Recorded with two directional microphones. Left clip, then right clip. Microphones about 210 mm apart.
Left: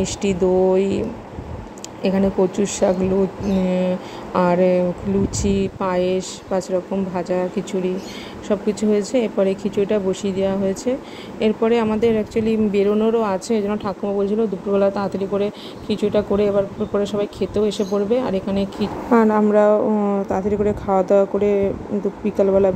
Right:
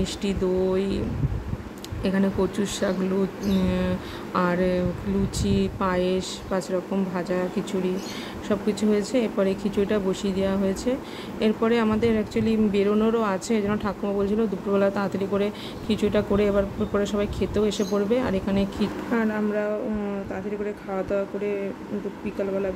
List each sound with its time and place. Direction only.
0.0 s speech: 10° left (ahead or behind)
2.0 s speech: 10° left (ahead or behind)